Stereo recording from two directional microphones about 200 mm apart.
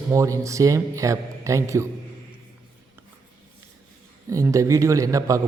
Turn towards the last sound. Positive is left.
turn(degrees=-15)  # may be behind; listen again after turning